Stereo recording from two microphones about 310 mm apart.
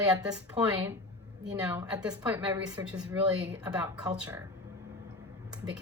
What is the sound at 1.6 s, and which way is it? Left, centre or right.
A woman's voice, centre.